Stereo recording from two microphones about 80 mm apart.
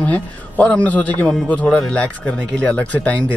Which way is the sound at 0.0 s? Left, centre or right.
Centre.